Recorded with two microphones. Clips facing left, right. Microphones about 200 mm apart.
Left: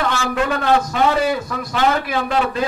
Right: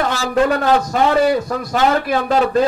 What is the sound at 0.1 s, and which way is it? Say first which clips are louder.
A man's voice: right 4 dB; 40° right (ahead or behind).